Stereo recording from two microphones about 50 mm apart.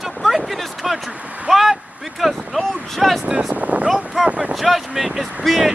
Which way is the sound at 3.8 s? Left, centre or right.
Centre.